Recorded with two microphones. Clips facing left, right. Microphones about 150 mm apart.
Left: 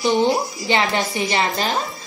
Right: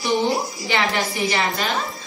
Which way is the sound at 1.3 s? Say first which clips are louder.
Left 2 dB; 30° left (ahead or behind).